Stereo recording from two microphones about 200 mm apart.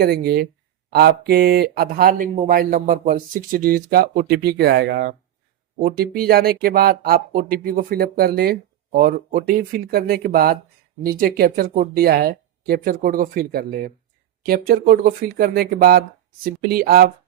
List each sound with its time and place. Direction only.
0.0 s speech: 50° right (ahead or behind)